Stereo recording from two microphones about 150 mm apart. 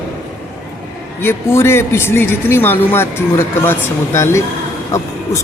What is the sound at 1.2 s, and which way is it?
Speech, 15° left (ahead or behind).